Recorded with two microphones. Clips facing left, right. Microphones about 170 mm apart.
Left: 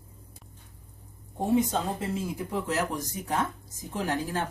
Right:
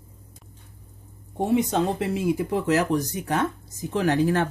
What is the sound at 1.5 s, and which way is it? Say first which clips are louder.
Speech: right 3 dB; 75° right (ahead or behind).